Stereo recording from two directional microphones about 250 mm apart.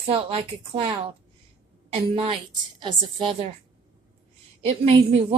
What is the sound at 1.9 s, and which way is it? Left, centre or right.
A woman's voice, right.